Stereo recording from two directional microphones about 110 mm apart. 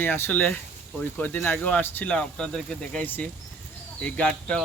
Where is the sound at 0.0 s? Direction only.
15° left (ahead or behind).